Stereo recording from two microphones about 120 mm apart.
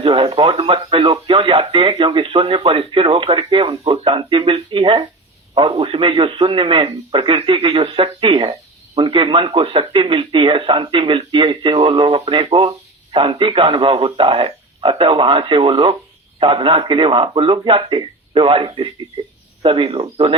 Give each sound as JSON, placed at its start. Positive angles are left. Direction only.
{"t": 0.0, "sound": "a man's voice", "side_deg": -45}